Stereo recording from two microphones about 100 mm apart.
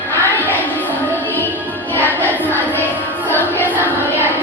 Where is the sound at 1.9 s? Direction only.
20° left (ahead or behind).